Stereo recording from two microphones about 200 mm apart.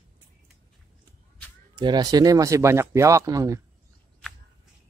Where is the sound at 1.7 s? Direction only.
20° right (ahead or behind).